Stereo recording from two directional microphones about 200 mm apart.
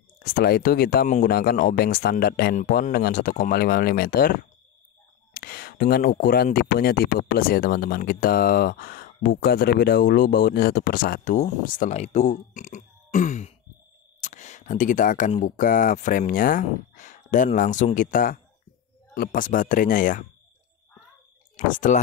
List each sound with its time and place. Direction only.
0.2 s speech: 50° left (ahead or behind)
21.5 s speech: 40° left (ahead or behind)